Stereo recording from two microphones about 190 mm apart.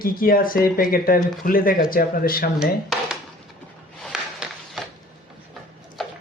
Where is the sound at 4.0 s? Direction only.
Centre (ahead or behind).